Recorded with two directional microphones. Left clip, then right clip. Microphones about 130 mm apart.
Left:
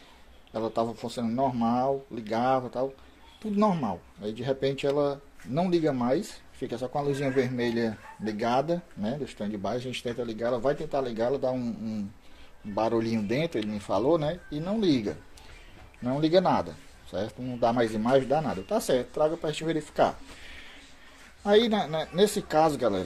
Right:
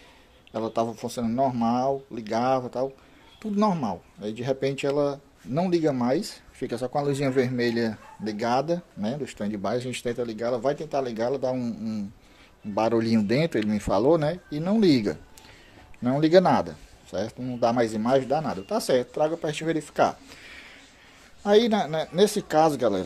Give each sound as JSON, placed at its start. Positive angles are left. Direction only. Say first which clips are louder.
{"t": 0.5, "sound": "speech", "louder": "right 2 dB", "side_deg": -20}
{"t": 8.2, "sound": "speech", "louder": "right 2 dB", "side_deg": -10}
{"t": 10.3, "sound": "speech", "louder": "left 1 dB", "side_deg": -15}
{"t": 12.7, "sound": "speech", "louder": "right 4 dB", "side_deg": -35}